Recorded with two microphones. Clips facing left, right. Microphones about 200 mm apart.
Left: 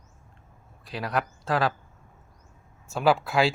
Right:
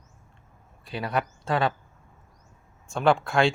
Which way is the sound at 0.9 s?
Centre (ahead or behind).